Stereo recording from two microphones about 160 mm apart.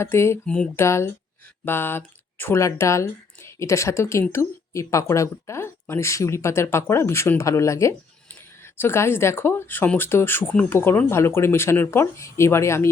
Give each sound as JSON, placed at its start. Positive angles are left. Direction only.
{"t": 0.0, "sound": "speech", "side_deg": 15}